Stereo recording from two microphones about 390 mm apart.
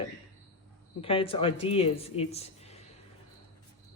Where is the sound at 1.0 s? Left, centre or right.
Centre.